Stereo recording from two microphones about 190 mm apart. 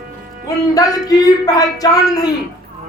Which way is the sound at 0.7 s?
20° left (ahead or behind).